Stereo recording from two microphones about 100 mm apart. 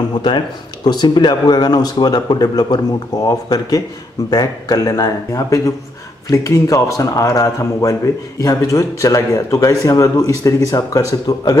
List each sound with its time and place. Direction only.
0.8 s a man's voice: 45° left (ahead or behind)